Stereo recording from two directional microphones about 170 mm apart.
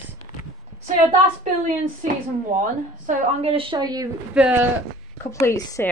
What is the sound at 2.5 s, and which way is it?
Speech, 50° right (ahead or behind).